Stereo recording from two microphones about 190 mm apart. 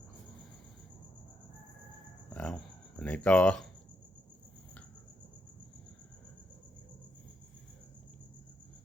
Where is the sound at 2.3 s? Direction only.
5° left (ahead or behind).